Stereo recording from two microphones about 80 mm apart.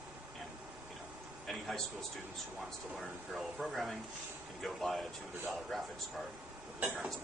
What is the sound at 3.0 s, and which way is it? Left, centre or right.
Speech, centre.